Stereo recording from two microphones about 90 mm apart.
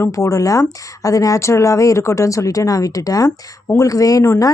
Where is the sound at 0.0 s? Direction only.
35° left (ahead or behind).